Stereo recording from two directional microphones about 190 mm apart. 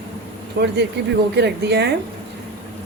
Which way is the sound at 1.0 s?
60° right (ahead or behind).